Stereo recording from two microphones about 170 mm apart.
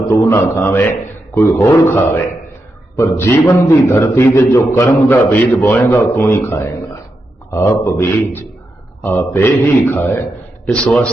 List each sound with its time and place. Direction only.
0.1 s a man's voice: 15° left (ahead or behind)